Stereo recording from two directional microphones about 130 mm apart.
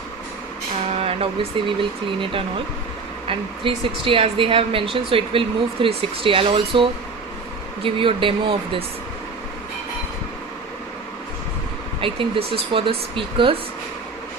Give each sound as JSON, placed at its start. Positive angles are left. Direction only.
{"t": 0.9, "sound": "speech", "side_deg": -50}
{"t": 11.9, "sound": "speech", "side_deg": -45}